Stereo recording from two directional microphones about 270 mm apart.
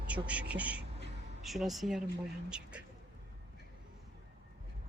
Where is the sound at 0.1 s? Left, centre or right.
Centre.